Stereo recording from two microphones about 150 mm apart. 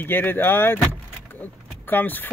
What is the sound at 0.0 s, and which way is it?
Speech, 15° left (ahead or behind).